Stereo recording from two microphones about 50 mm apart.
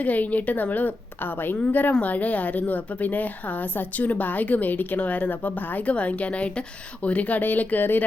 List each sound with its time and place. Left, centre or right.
0.0 s a woman's voice: left
1.9 s a woman's voice: left